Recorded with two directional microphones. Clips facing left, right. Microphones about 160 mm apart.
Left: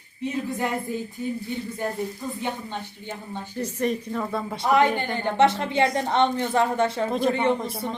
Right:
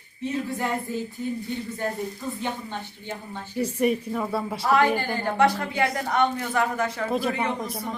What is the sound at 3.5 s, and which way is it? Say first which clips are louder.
Speech: right 3 dB; 10° right (ahead or behind).